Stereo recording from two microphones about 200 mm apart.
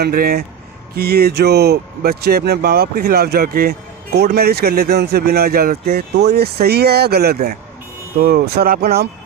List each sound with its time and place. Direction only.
0.0 s speech: 50° right (ahead or behind)